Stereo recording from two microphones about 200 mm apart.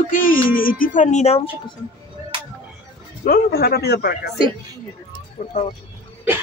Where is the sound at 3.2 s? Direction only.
50° left (ahead or behind).